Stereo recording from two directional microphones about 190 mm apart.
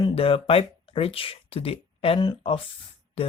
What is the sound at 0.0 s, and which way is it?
Speech, 30° left (ahead or behind).